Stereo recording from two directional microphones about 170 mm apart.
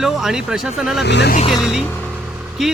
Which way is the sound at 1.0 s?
85° left.